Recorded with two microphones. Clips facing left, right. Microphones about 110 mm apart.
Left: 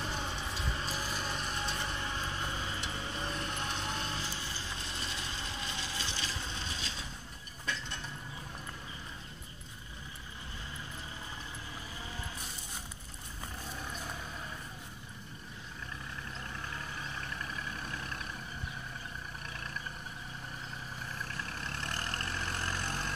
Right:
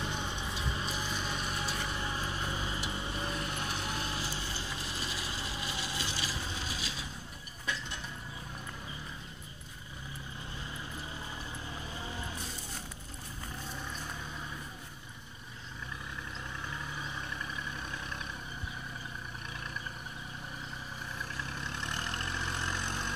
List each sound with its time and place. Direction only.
0.0 s a sound: centre (ahead or behind)
3.9 s vehicle: 10° right (ahead or behind)
5.0 s mechanisms: 10° right (ahead or behind)
12.0 s music: 25° right (ahead or behind)
21.5 s vehicle: centre (ahead or behind)